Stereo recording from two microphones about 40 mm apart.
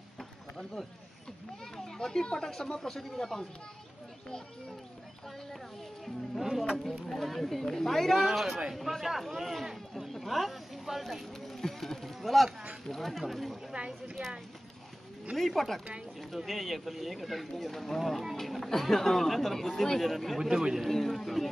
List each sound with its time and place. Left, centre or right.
0.2 s a sound: centre
1.8 s speech: centre
6.7 s speech: centre
8.2 s speech: centre
13.7 s speech: right
15.3 s speech: centre
20.3 s speech: centre
20.9 s speech: centre